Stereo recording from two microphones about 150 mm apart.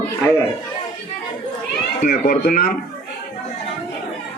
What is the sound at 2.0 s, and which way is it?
Speech, 75° left (ahead or behind).